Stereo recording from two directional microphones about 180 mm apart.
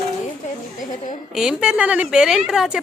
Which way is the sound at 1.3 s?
5° right (ahead or behind).